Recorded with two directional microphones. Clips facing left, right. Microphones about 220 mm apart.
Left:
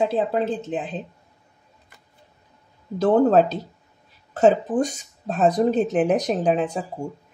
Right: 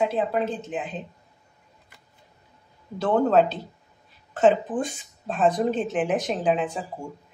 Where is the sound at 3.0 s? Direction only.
40° left (ahead or behind).